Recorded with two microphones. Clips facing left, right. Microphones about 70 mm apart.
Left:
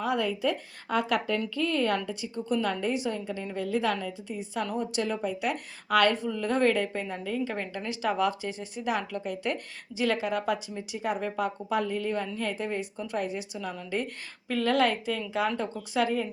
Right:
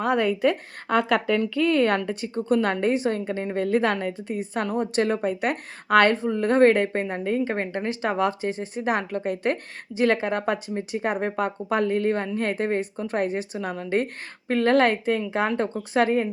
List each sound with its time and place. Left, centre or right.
0.0 s a woman's voice: right